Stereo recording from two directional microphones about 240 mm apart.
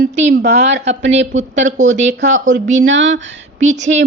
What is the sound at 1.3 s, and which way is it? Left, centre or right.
Speech, right.